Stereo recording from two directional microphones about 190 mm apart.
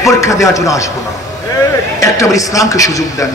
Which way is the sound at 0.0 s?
15° left (ahead or behind).